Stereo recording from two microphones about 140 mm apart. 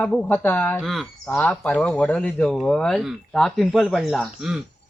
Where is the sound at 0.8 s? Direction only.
Centre (ahead or behind).